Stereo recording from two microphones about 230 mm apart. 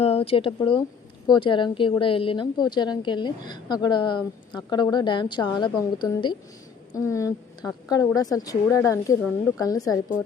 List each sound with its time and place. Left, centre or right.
0.0 s a woman's voice: left